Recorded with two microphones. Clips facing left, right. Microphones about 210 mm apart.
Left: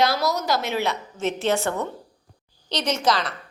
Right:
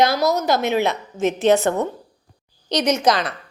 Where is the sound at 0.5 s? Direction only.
20° right (ahead or behind).